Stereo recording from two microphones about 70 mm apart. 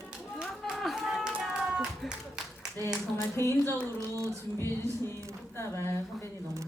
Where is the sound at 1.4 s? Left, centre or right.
Centre.